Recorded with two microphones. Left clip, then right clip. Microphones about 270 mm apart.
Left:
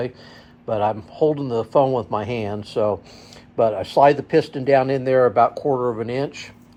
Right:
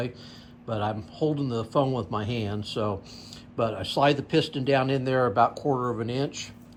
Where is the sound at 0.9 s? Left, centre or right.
Left.